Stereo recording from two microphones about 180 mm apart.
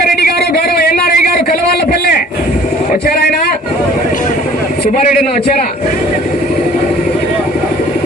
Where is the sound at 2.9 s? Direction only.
60° left (ahead or behind).